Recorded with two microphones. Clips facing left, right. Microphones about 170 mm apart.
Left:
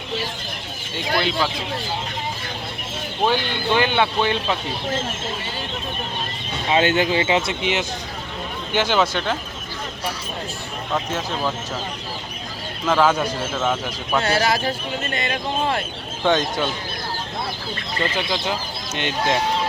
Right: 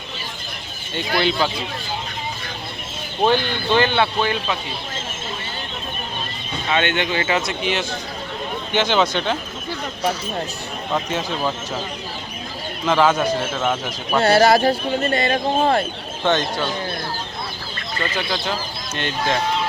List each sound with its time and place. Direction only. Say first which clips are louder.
0.9 s speech: right 2 dB; centre (ahead or behind)
3.2 s speech: right 2 dB; 15° left (ahead or behind)
6.7 s speech: left 3 dB; 35° left (ahead or behind)
7.2 s speech: left 1 dB; 20° left (ahead or behind)
8.7 s speech: right 1 dB; 5° left (ahead or behind)
10.9 s speech: right 1 dB; 5° right (ahead or behind)
12.8 s speech: right 1 dB; centre (ahead or behind)
13.6 s speech: even; 10° right (ahead or behind)
14.2 s speech: right 7 dB; 35° right (ahead or behind)
18.9 s speech: left 1 dB; 15° left (ahead or behind)